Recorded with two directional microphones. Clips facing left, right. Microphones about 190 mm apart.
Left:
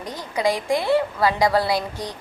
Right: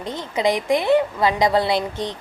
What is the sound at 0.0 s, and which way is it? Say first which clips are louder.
A woman's voice: right 2 dB; 25° right (ahead or behind).